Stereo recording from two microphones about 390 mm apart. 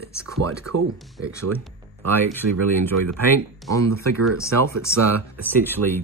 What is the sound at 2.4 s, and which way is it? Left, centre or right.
Speech, right.